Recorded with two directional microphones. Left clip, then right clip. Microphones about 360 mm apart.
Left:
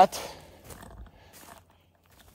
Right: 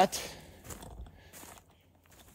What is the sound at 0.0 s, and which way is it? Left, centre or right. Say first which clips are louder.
Speech: left 7 dB; centre.